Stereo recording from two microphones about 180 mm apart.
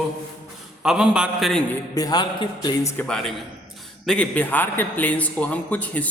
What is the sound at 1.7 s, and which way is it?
Speech, 20° left (ahead or behind).